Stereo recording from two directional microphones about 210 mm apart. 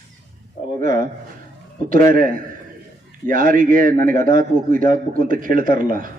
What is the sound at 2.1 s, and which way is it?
A man's voice, 40° right (ahead or behind).